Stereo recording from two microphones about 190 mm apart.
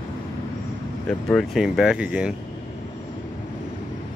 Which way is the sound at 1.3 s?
Centre (ahead or behind).